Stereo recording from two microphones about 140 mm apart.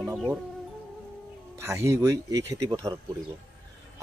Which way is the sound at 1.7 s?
20° right (ahead or behind).